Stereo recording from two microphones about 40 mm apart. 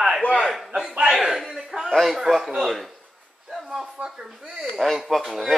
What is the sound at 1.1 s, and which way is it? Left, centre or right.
A man's voice, centre.